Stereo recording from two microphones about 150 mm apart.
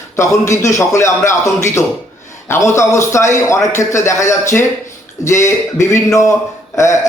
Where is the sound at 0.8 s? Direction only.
20° left (ahead or behind).